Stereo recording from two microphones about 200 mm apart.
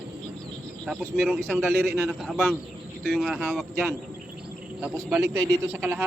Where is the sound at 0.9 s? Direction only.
Centre (ahead or behind).